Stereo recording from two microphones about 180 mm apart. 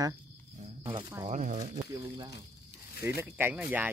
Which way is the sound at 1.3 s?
45° right (ahead or behind).